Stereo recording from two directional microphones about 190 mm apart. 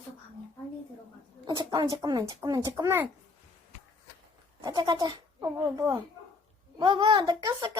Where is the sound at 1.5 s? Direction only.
20° right (ahead or behind).